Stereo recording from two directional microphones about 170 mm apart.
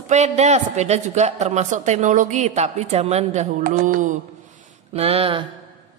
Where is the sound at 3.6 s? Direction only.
55° right (ahead or behind).